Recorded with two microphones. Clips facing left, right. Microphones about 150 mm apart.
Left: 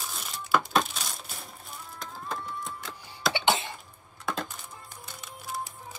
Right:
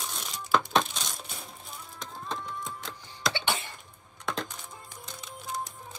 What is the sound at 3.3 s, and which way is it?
Cough, 20° left (ahead or behind).